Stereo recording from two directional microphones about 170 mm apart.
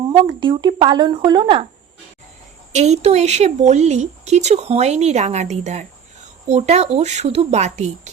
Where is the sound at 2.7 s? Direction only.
40° right (ahead or behind).